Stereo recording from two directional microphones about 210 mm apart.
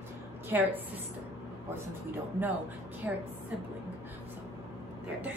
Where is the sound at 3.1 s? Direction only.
5° right (ahead or behind).